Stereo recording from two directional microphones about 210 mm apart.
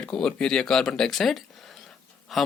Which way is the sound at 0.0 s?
5° left (ahead or behind).